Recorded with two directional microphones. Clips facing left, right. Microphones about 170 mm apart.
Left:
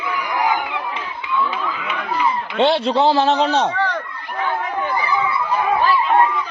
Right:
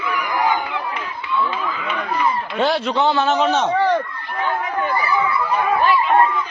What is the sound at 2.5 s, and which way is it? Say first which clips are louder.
A man's voice: left 4 dB; 30° left (ahead or behind).